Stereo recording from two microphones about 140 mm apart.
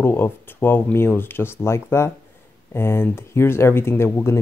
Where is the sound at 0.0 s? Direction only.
15° left (ahead or behind).